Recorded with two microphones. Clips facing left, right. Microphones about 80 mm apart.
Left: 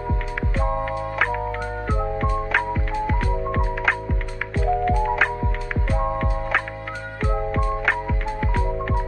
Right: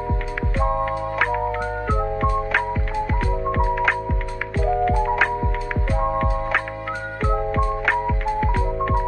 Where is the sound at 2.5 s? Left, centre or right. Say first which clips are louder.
Right 1 dB; centre.